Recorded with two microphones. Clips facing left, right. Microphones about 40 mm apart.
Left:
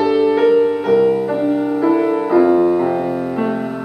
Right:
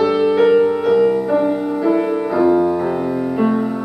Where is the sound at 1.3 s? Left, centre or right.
Centre.